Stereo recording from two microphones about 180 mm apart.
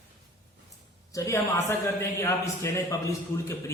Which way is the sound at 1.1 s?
15° left (ahead or behind).